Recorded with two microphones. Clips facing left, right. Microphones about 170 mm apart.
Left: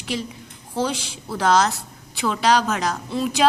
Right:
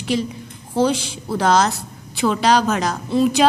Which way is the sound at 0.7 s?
25° right (ahead or behind).